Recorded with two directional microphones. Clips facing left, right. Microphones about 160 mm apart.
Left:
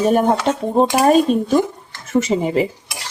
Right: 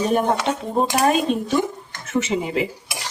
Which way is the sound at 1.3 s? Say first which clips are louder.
Left 5 dB; 40° left (ahead or behind).